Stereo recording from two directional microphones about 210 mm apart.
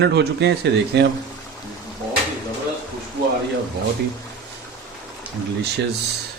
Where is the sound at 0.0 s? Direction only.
55° right (ahead or behind).